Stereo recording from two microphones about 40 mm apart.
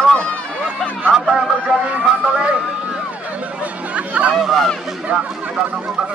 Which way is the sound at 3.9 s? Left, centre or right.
Right.